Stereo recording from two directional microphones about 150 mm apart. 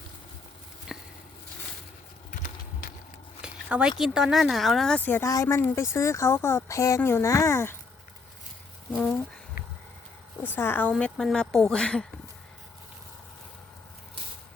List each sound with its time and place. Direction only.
0.9 s a sound: centre (ahead or behind)
3.4 s speech: 10° right (ahead or behind); by 7.8 s 15° left (ahead or behind)
10.4 s speech: 15° left (ahead or behind)
10.9 s speech: centre (ahead or behind)